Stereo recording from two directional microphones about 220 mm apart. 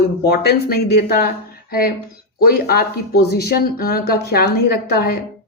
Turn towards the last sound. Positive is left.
turn(degrees=45)  # may be behind; listen again after turning